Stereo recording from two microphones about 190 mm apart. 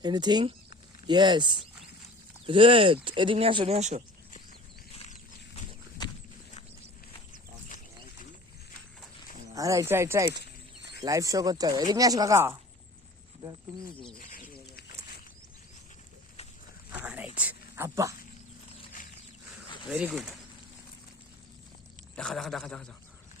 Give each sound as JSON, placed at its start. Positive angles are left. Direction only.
{"t": 0.0, "sound": "speech", "side_deg": -20}
{"t": 9.5, "sound": "speech", "side_deg": -15}
{"t": 13.9, "sound": "speech", "side_deg": 5}
{"t": 14.2, "sound": "bird", "side_deg": 45}
{"t": 17.0, "sound": "whispering", "side_deg": -5}
{"t": 17.3, "sound": "a sound", "side_deg": -10}
{"t": 19.9, "sound": "speech", "side_deg": -5}
{"t": 22.1, "sound": "speech", "side_deg": 5}